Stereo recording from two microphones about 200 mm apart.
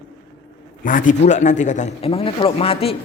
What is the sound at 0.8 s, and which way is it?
A man's voice, 40° left (ahead or behind).